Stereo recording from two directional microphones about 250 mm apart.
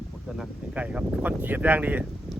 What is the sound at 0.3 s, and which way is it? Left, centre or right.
Speech, centre.